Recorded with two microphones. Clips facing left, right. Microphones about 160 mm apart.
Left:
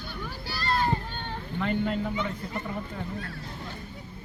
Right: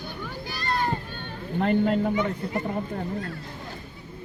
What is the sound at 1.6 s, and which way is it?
A man's voice, 45° right (ahead or behind).